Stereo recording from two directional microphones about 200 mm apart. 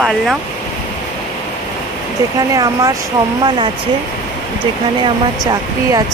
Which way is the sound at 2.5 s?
20° right (ahead or behind).